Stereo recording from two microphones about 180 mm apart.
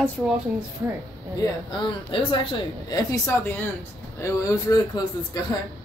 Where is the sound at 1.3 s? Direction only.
25° left (ahead or behind).